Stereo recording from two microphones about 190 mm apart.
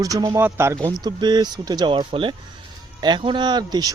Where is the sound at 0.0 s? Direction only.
20° right (ahead or behind).